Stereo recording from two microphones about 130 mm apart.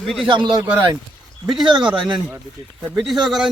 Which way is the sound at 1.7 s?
35° right (ahead or behind).